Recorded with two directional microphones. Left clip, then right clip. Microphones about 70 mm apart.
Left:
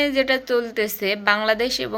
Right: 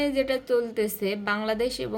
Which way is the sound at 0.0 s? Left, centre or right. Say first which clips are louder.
Left 6 dB; right.